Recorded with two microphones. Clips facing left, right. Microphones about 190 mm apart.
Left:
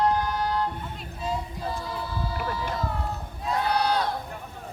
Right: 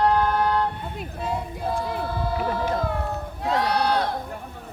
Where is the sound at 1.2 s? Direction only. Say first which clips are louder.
Right 2 dB; 60° right (ahead or behind).